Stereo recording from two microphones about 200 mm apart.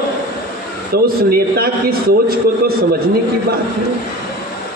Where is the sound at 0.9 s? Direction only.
50° right (ahead or behind).